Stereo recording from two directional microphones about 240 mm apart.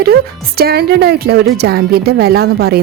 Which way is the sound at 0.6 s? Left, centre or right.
Right.